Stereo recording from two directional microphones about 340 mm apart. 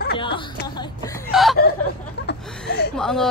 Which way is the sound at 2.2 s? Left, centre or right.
Left.